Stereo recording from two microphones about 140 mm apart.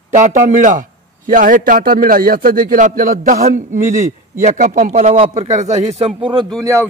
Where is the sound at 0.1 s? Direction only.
65° right (ahead or behind).